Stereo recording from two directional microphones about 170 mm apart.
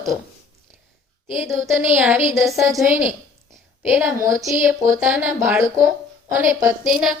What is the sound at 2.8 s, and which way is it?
A woman's voice, 10° right (ahead or behind).